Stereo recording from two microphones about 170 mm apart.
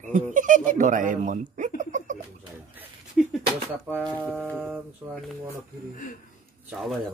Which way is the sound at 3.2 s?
5° right (ahead or behind).